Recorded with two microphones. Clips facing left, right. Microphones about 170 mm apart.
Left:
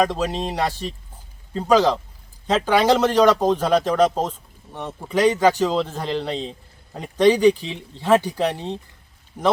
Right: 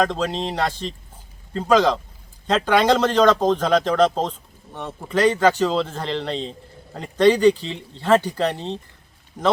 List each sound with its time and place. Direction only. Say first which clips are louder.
0.0 s a man's voice: even; 10° left (ahead or behind)